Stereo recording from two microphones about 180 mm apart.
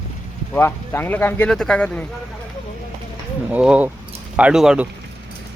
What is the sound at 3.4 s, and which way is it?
Speech, 5° right (ahead or behind).